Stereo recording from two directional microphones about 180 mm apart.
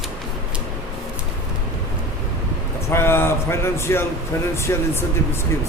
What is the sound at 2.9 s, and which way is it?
Speech, 15° left (ahead or behind).